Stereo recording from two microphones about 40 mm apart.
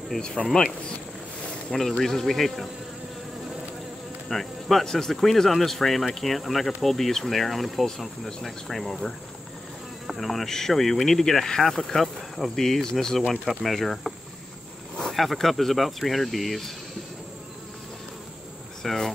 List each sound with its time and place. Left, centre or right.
0.5 s speech: centre
1.7 s speech: centre
4.3 s speech: centre
15.3 s speech: centre
18.8 s cricket: centre